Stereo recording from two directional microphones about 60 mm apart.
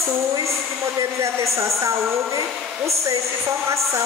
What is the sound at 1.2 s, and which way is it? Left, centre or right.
A woman's voice, right.